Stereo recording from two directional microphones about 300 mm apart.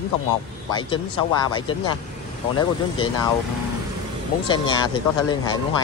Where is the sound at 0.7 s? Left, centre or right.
Centre.